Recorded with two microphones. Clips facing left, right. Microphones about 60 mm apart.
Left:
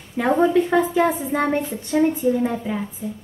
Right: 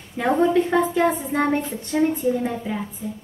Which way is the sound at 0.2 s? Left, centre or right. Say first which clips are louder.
Left 1 dB; centre.